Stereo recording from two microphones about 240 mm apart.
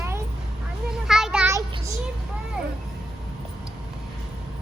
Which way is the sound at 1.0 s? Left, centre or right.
Centre.